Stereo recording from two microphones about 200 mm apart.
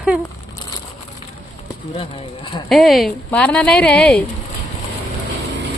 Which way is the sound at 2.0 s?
25° left (ahead or behind).